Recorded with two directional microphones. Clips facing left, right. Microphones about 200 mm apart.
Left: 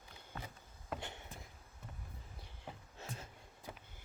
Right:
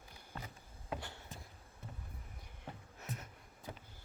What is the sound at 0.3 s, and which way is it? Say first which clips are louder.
Vehicle: even; 5° left (ahead or behind).